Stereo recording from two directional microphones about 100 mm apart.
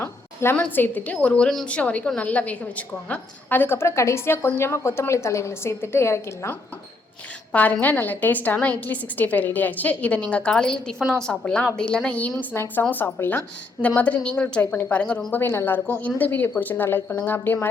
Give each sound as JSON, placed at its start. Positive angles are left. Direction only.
{"t": 0.0, "sound": "a sound", "side_deg": 25}
{"t": 0.5, "sound": "a woman's voice", "side_deg": 15}
{"t": 7.5, "sound": "a woman's voice", "side_deg": 15}